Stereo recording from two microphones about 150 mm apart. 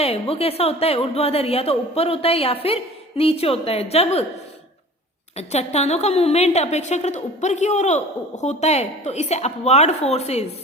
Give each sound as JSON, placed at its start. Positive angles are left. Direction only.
{"t": 0.0, "sound": "speech", "side_deg": 40}
{"t": 5.4, "sound": "a woman's voice", "side_deg": 45}